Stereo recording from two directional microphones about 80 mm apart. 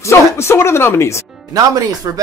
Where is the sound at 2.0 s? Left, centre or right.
Right.